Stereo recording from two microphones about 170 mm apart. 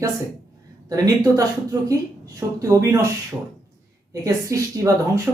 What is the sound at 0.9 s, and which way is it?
A woman's voice, 20° right (ahead or behind).